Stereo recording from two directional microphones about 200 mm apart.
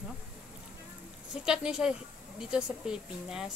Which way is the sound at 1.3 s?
5° right (ahead or behind).